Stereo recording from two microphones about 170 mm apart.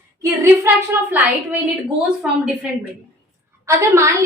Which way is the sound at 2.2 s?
5° right (ahead or behind).